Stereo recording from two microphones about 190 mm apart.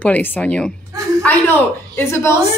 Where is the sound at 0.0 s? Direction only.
10° left (ahead or behind).